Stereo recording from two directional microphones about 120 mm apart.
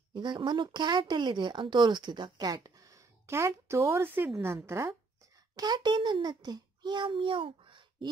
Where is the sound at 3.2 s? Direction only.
20° right (ahead or behind).